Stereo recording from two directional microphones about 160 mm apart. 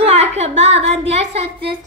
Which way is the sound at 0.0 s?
40° right (ahead or behind).